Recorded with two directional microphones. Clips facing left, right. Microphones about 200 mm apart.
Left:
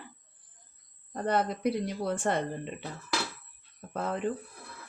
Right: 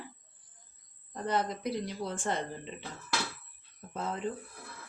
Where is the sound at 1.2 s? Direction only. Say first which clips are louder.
Left 4 dB; 55° left (ahead or behind).